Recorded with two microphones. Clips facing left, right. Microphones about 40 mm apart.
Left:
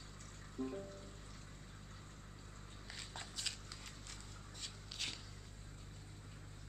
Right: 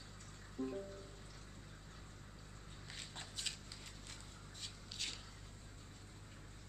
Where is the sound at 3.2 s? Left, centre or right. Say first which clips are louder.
Left 1 dB; centre.